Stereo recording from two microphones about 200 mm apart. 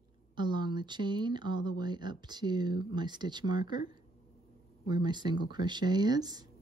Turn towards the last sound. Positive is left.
turn(degrees=-20)  # may be behind; listen again after turning